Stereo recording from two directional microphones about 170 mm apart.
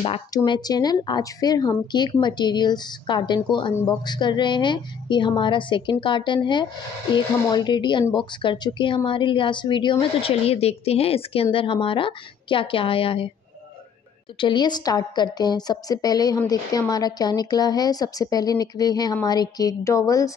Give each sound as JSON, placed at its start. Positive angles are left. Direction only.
{"t": 0.3, "sound": "a woman's voice", "side_deg": 20}
{"t": 14.4, "sound": "a woman's voice", "side_deg": 25}